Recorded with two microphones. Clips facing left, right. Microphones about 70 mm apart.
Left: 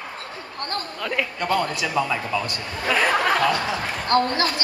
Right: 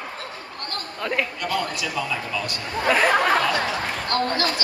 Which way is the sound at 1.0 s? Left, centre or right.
Centre.